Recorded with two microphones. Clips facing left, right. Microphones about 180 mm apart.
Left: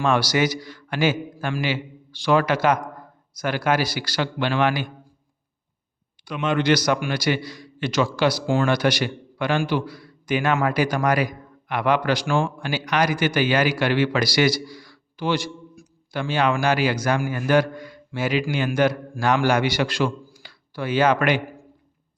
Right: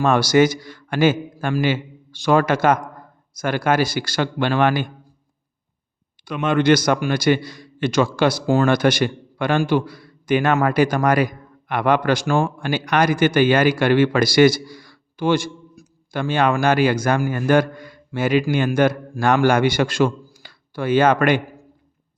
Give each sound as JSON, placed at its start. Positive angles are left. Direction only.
{"t": 0.0, "sound": "a man's voice", "side_deg": -45}
{"t": 6.2, "sound": "a man's voice", "side_deg": -50}
{"t": 12.5, "sound": "a man's voice", "side_deg": -50}